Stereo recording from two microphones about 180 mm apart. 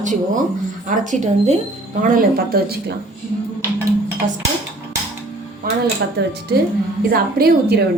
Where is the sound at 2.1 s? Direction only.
55° right (ahead or behind).